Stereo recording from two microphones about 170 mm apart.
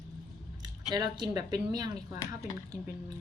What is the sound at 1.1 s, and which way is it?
Speech, 25° right (ahead or behind).